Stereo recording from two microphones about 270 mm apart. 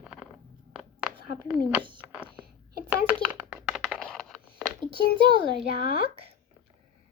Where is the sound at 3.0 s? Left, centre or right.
Centre.